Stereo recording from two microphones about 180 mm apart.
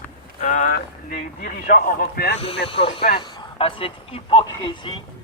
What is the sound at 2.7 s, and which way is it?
Speech, 30° left (ahead or behind).